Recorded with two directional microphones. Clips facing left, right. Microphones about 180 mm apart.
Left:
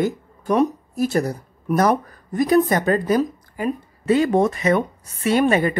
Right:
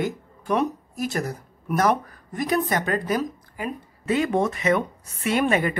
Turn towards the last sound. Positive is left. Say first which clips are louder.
# left 4 dB
turn(degrees=35)  # may be behind; listen again after turning